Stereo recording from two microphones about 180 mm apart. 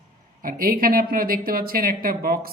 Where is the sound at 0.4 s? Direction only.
50° right (ahead or behind).